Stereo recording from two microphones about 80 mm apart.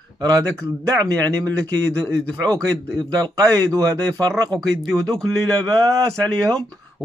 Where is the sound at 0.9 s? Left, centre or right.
Right.